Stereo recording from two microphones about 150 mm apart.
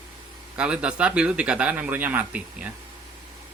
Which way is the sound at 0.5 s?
5° right (ahead or behind).